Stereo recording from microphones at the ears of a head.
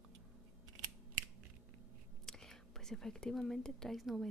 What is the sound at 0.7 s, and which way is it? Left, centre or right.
Scissors, right.